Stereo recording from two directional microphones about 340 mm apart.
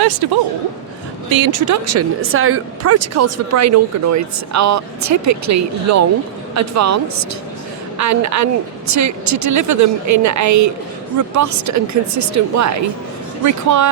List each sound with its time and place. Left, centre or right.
0.2 s a woman's voice: right
1.3 s a woman's voice: right